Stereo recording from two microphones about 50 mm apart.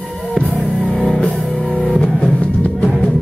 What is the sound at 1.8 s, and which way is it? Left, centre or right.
Music, centre.